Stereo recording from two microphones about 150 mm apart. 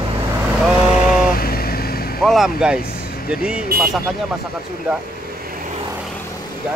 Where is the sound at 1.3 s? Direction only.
85° left.